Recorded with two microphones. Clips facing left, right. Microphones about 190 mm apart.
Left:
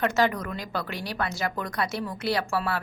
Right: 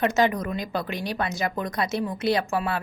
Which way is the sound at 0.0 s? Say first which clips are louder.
Right 2 dB; 20° right (ahead or behind).